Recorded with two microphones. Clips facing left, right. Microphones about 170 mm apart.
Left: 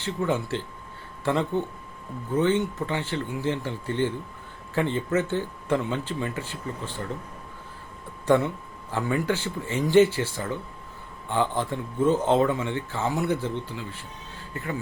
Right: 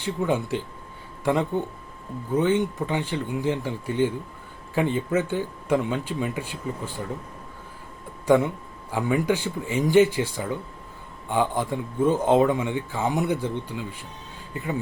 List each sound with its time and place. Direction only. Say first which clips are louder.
0.0 s speech: right 2 dB; 15° right (ahead or behind)
8.9 s speech: right 3 dB; 15° right (ahead or behind)